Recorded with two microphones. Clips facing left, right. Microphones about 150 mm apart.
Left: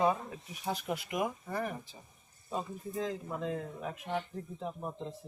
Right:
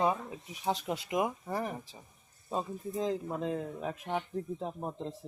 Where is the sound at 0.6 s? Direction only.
25° right (ahead or behind).